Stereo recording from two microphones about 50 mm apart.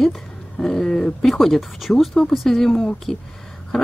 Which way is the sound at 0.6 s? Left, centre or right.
Centre.